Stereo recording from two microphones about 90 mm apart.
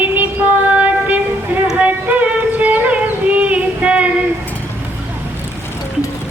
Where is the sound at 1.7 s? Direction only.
15° right (ahead or behind).